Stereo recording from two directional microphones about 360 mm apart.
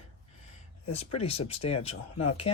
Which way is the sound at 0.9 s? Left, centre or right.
Centre.